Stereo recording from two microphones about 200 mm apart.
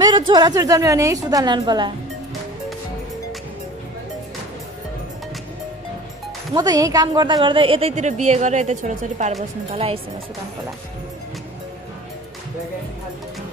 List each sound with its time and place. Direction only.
0.3 s a woman's voice: 20° right (ahead or behind)
6.5 s a woman's voice: 20° right (ahead or behind)